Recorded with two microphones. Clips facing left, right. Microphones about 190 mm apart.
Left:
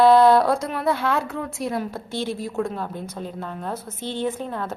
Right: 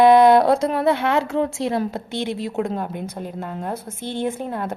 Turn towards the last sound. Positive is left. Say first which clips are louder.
# right 2 dB
turn(degrees=-15)  # may be behind; listen again after turning